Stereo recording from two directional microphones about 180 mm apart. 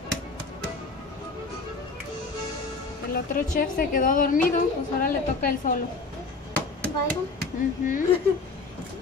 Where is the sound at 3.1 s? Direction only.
55° left (ahead or behind).